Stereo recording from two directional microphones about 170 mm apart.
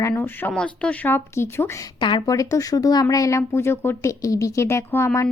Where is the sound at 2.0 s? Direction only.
25° left (ahead or behind).